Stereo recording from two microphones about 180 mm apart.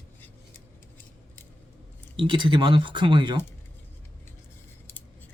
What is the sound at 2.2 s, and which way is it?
Speech, 25° right (ahead or behind).